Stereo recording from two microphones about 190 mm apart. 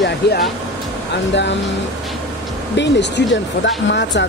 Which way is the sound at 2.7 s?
65° left (ahead or behind).